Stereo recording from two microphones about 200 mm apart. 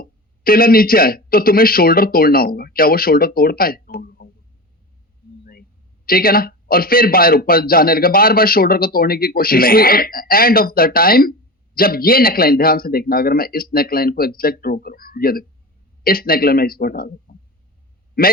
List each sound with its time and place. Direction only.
0.0 s a man's voice: 45° left (ahead or behind)
6.1 s a man's voice: 45° left (ahead or behind)